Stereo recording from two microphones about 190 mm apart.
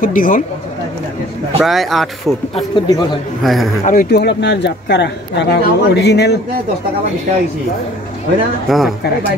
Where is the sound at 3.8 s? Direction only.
40° left (ahead or behind).